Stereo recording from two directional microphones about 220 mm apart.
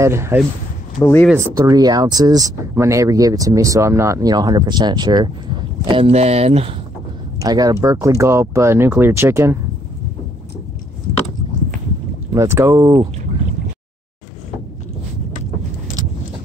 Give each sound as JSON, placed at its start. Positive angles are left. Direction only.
{"t": 0.0, "sound": "speech", "side_deg": -10}
{"t": 1.0, "sound": "speech", "side_deg": 10}
{"t": 1.3, "sound": "speech", "side_deg": -15}
{"t": 7.3, "sound": "speech", "side_deg": -15}
{"t": 12.4, "sound": "speech", "side_deg": -10}